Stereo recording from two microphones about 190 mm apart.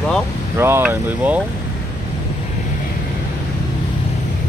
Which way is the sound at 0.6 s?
15° right (ahead or behind).